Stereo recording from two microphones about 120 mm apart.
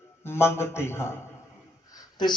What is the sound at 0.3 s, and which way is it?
Speech, 20° left (ahead or behind).